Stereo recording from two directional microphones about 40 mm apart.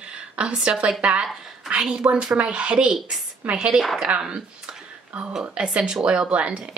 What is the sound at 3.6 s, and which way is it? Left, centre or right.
Speech, centre.